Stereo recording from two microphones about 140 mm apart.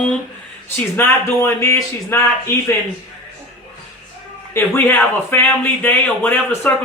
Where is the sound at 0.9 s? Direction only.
20° left (ahead or behind).